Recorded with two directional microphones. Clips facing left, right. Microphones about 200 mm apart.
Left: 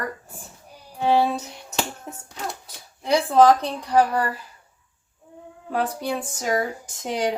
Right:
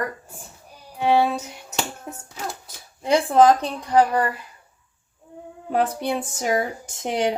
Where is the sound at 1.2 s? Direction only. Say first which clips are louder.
Even; 5° right (ahead or behind).